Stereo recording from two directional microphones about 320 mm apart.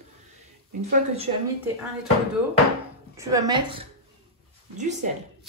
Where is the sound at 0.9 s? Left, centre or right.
Centre.